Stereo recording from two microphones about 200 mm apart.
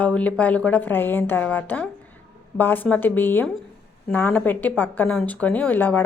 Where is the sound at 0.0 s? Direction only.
5° left (ahead or behind).